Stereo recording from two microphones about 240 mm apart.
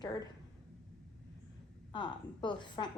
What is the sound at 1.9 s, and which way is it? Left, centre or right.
A woman's voice, centre.